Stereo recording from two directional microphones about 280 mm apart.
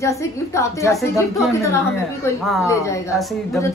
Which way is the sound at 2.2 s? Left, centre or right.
Centre.